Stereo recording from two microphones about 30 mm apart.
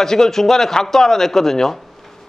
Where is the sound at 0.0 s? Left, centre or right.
Centre.